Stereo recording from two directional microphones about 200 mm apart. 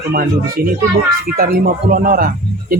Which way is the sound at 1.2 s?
45° right (ahead or behind).